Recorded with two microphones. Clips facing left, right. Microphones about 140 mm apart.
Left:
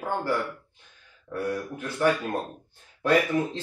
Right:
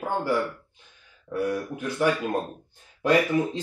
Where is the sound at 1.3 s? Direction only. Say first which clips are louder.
Right 3 dB; 15° right (ahead or behind).